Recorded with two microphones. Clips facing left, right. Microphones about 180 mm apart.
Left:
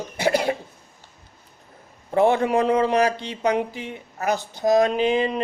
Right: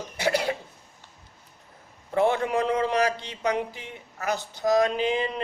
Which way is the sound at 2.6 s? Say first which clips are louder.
Left 5 dB; 55° left (ahead or behind).